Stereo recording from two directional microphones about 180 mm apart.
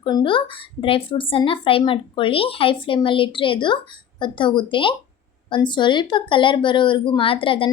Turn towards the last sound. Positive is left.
turn(degrees=30)  # may be behind; listen again after turning